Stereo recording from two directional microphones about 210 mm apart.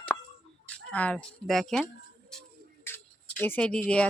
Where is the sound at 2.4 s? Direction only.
10° left (ahead or behind).